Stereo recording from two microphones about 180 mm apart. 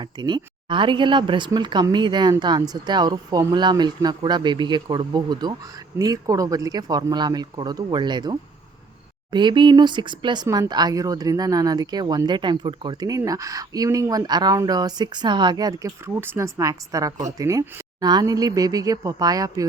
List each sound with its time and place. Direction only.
0.0 s speech: 25° right (ahead or behind)